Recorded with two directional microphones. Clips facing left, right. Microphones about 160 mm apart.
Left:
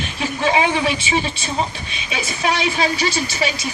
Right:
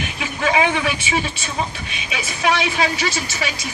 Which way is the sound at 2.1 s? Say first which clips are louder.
Right 1 dB; 35° left (ahead or behind).